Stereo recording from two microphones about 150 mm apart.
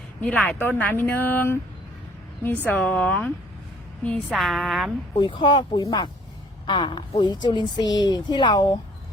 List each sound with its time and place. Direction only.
0.2 s a woman's voice: 5° left (ahead or behind)
5.1 s a woman's voice: 30° left (ahead or behind)